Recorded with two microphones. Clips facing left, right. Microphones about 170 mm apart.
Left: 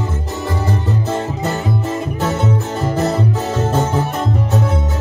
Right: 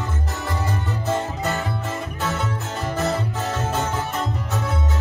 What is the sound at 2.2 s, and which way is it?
Music, 30° left (ahead or behind).